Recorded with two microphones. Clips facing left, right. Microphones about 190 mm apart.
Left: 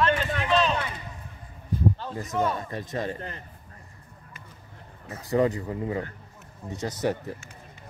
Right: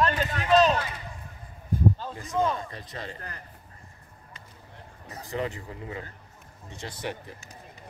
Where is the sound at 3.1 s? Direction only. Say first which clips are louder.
Left 5 dB; 25° left (ahead or behind).